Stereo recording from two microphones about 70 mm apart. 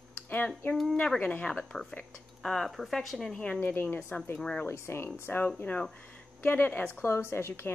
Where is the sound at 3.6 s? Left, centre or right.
Left.